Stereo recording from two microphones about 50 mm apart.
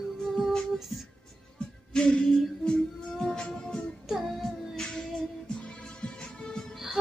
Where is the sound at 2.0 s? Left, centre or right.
Centre.